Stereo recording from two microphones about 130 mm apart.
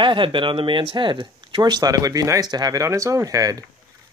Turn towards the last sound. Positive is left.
turn(degrees=-25)  # may be behind; listen again after turning